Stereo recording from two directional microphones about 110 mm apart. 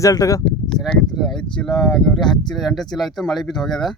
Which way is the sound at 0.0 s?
30° left (ahead or behind).